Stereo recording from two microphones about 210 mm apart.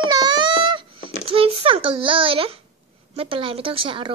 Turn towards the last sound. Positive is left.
turn(degrees=-25)  # may be behind; listen again after turning